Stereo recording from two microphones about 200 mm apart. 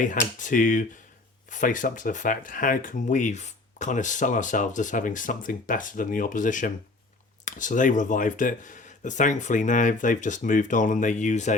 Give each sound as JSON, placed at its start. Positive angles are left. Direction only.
{"t": 0.0, "sound": "speech", "side_deg": 40}